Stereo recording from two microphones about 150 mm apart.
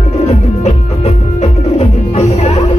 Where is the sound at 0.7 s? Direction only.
45° left (ahead or behind).